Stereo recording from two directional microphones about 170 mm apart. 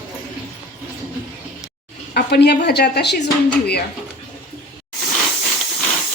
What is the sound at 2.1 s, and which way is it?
A woman's voice, 75° left (ahead or behind).